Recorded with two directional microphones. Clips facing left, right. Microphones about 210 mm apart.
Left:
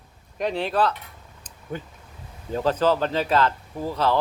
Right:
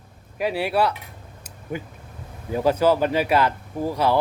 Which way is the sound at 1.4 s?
10° right (ahead or behind).